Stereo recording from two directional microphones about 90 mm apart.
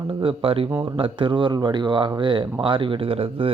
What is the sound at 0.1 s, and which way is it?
Speech, 85° right.